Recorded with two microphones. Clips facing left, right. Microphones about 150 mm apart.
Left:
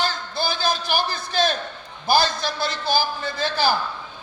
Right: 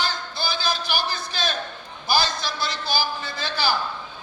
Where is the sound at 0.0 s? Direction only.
50° left (ahead or behind).